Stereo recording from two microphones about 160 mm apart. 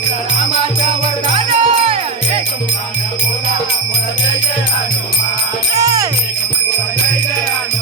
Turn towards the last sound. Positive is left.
turn(degrees=-20)  # may be behind; listen again after turning